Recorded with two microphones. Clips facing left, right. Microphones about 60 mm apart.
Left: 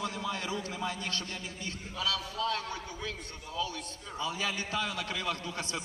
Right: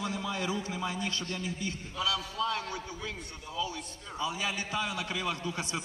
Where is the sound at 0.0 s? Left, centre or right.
Right.